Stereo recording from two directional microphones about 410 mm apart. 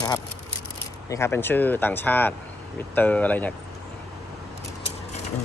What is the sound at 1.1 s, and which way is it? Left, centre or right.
Speech, centre.